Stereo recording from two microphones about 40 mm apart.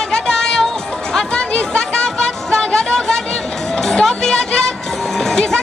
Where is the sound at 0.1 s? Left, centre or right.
Centre.